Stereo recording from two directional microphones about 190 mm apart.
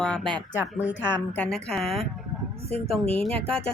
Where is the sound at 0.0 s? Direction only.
5° left (ahead or behind).